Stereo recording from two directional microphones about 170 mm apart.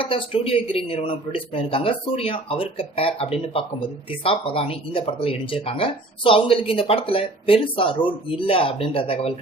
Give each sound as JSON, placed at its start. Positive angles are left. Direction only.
{"t": 0.0, "sound": "speech", "side_deg": 30}